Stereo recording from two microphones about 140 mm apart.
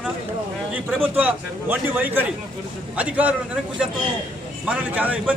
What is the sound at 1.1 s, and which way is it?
A man's voice, 10° right (ahead or behind).